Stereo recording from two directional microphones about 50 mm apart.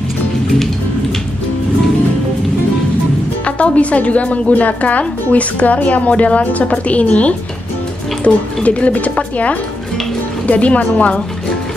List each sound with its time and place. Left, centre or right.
3.4 s speech: left
10.4 s speech: left